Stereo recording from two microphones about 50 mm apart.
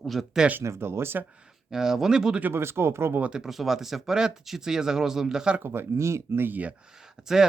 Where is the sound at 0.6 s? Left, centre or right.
Right.